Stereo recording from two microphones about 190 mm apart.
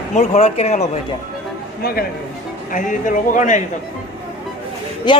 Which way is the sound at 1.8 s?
55° left (ahead or behind).